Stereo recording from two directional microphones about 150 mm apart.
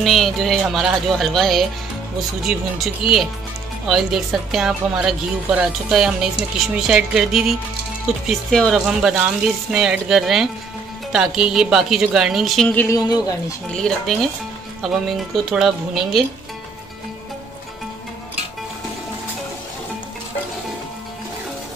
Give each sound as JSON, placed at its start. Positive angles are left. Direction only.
{"t": 0.0, "sound": "a woman's voice", "side_deg": 0}
{"t": 12.9, "sound": "speech", "side_deg": 25}
{"t": 13.7, "sound": "a woman's voice", "side_deg": 5}